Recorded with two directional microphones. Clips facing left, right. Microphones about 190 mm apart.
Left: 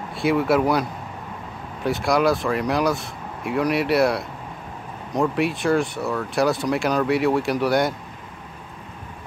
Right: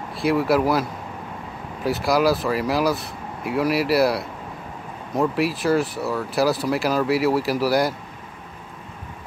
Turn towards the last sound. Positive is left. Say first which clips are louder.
# even
turn(degrees=0)  # may be behind; listen again after turning